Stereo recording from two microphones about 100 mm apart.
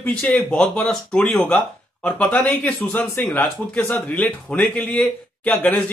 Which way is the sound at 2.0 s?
15° left (ahead or behind).